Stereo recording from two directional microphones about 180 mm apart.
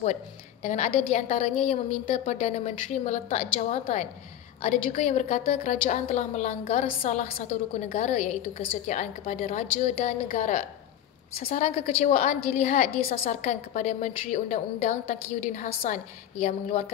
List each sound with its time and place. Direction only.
0.0 s a woman's voice: 40° left (ahead or behind)
11.3 s a woman's voice: 55° left (ahead or behind)
11.6 s a woman's voice: 40° left (ahead or behind)